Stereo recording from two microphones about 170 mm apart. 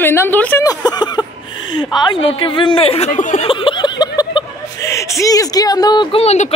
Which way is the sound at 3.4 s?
30° left (ahead or behind).